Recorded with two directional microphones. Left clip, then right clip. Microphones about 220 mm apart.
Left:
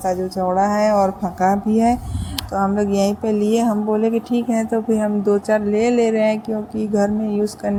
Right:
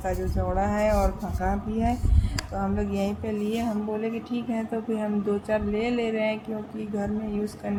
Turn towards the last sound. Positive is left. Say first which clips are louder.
# left 11 dB
turn(degrees=30)  # may be behind; listen again after turning